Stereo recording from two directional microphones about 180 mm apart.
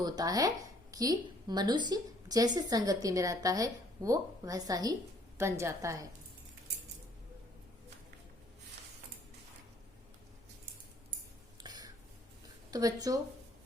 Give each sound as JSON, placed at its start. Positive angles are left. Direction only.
{"t": 0.0, "sound": "a woman's voice", "side_deg": -20}
{"t": 11.6, "sound": "a sound", "side_deg": -20}
{"t": 12.7, "sound": "speech", "side_deg": -20}